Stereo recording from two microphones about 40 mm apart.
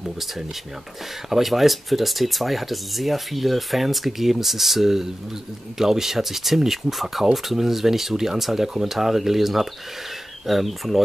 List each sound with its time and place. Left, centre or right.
1.3 s speech: centre